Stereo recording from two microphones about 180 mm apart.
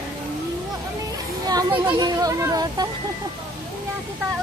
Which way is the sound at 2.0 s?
20° right (ahead or behind).